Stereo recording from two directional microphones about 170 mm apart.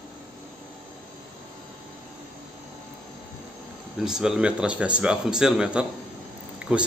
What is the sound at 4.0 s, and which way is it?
Speech, 5° right (ahead or behind).